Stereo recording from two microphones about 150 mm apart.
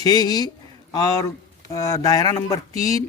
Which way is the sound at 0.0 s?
25° left (ahead or behind).